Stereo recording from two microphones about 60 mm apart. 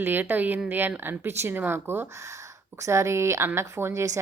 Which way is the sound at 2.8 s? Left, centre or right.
Right.